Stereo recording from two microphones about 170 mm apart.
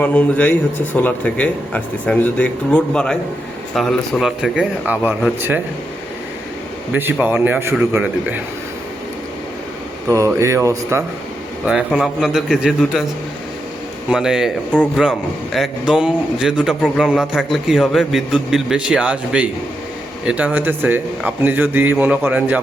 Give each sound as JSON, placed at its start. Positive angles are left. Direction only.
{"t": 0.0, "sound": "speech", "side_deg": 10}
{"t": 6.9, "sound": "speech", "side_deg": -10}
{"t": 10.1, "sound": "speech", "side_deg": -15}
{"t": 11.6, "sound": "a man's voice", "side_deg": -5}
{"t": 14.1, "sound": "a man's voice", "side_deg": -5}